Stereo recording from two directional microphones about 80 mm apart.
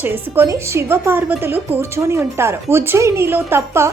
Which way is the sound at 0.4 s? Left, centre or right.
Right.